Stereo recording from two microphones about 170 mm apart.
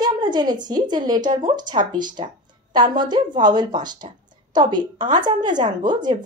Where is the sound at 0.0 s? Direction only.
25° right (ahead or behind).